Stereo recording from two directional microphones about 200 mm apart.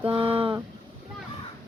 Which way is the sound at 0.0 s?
25° right (ahead or behind).